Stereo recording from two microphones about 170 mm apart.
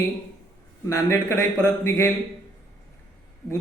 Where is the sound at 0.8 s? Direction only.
15° left (ahead or behind).